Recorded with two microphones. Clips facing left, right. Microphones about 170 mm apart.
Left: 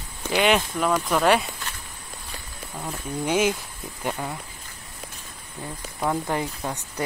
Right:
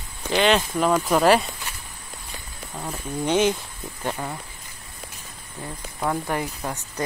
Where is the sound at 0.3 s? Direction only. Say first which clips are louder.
Right 1 dB; 10° left (ahead or behind).